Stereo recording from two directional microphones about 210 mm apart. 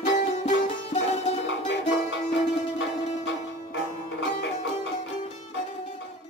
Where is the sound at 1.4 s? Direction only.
55° left (ahead or behind).